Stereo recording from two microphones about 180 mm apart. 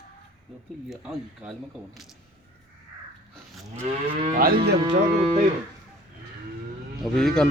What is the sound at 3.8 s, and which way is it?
Speech, 40° right (ahead or behind).